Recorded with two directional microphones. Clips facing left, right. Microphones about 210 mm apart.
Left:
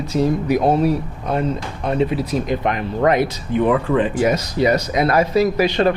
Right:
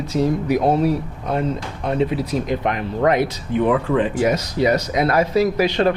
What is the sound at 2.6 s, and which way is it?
Speech, 15° left (ahead or behind).